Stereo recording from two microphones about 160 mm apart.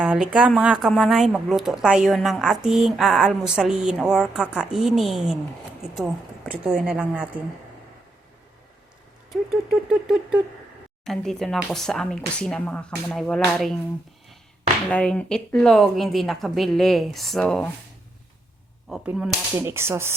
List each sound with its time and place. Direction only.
0.0 s a woman's voice: 5° right (ahead or behind)
9.9 s a woman's voice: 5° right (ahead or behind)
14.8 s speech: 10° left (ahead or behind)
18.9 s speech: 5° right (ahead or behind)
19.5 s a woman's voice: 15° right (ahead or behind)